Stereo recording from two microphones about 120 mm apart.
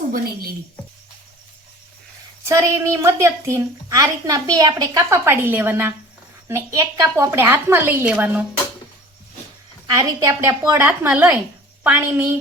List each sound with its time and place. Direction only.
2.4 s a woman's voice: 25° right (ahead or behind)
9.8 s a woman's voice: 30° right (ahead or behind)
10.8 s a woman's voice: 10° right (ahead or behind)